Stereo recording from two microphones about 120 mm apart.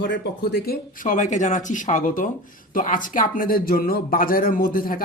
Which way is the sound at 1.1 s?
90° left.